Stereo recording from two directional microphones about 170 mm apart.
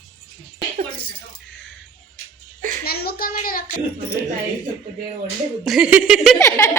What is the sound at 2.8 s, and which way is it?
Speech, 65° left (ahead or behind).